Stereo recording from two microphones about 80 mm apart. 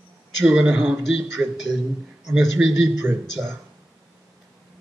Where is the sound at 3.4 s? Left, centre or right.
Right.